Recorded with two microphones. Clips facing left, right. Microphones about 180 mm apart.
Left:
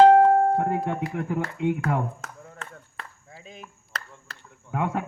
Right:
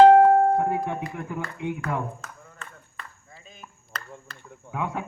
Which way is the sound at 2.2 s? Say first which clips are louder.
Left 3 dB; 90° left.